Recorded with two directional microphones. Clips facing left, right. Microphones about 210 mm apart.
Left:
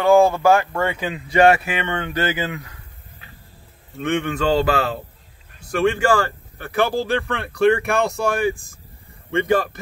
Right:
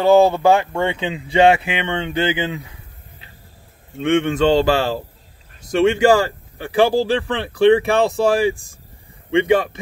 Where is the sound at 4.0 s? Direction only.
20° right (ahead or behind).